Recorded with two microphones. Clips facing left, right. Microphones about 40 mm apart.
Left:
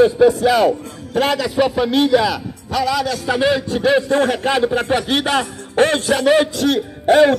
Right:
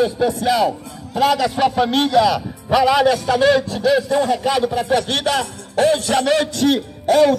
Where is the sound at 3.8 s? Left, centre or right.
Left.